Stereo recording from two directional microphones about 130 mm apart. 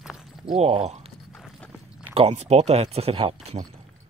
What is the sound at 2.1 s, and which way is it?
Speech, 55° right (ahead or behind).